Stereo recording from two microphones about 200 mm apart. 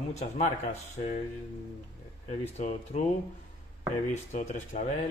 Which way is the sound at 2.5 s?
35° left (ahead or behind).